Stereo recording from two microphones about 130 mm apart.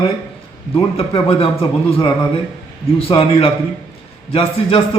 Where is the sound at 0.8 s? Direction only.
45° left (ahead or behind).